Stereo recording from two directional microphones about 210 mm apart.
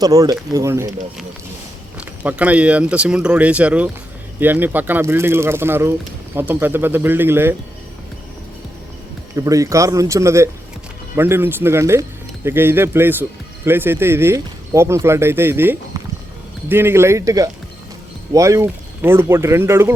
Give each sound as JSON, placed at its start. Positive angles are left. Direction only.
{"t": 0.0, "sound": "speech", "side_deg": -15}
{"t": 2.0, "sound": "speech", "side_deg": -5}
{"t": 9.3, "sound": "speech", "side_deg": -15}